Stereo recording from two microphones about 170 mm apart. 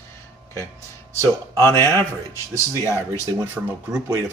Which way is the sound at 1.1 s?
15° right (ahead or behind).